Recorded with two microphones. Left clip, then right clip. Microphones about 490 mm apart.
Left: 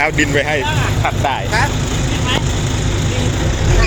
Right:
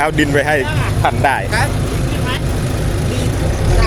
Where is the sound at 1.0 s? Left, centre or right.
Right.